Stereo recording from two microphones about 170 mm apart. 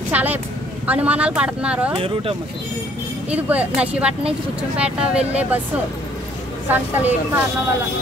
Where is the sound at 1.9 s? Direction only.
35° right (ahead or behind).